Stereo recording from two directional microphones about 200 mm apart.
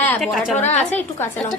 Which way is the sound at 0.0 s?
5° left (ahead or behind).